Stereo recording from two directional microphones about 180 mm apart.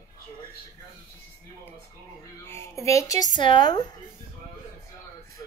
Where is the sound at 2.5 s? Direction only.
15° left (ahead or behind).